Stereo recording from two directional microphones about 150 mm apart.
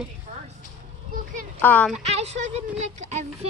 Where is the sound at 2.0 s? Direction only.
45° right (ahead or behind).